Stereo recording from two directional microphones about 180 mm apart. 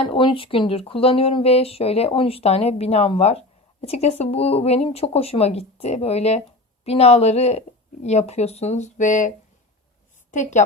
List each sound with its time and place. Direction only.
0.0 s speech: 30° left (ahead or behind); by 9.3 s 45° left (ahead or behind)
10.3 s a woman's voice: 40° left (ahead or behind)